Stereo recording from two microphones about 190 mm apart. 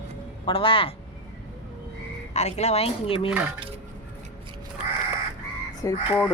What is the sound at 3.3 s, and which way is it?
Dishes, 10° right (ahead or behind).